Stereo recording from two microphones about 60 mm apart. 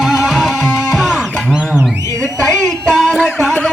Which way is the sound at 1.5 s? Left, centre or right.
Centre.